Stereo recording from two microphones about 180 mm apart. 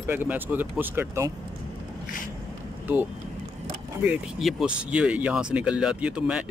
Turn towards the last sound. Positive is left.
turn(degrees=-5)  # may be behind; listen again after turning